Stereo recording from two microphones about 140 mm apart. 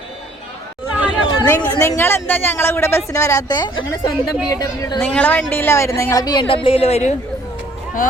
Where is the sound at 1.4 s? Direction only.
25° left (ahead or behind).